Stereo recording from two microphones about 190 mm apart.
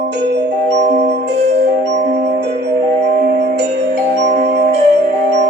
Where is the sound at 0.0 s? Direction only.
65° right (ahead or behind).